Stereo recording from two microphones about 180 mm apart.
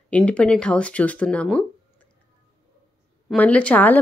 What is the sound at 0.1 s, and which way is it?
Speech, 5° left (ahead or behind).